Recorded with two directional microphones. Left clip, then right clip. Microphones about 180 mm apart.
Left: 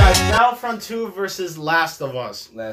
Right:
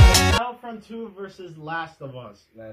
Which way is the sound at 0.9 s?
15° left (ahead or behind).